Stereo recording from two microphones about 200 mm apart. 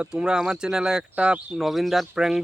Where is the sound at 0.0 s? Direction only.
5° right (ahead or behind).